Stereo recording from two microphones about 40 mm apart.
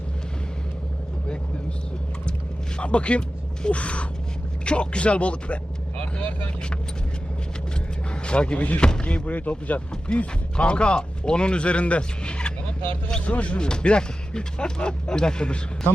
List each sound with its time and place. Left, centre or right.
2.7 s speech: left
8.1 s speech: left
9.3 s speech: left
10.1 s speech: left